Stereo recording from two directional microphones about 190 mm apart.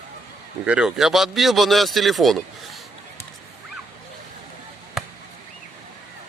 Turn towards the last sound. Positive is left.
turn(degrees=0)  # may be behind; listen again after turning